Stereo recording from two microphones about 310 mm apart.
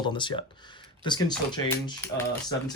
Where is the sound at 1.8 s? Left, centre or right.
Centre.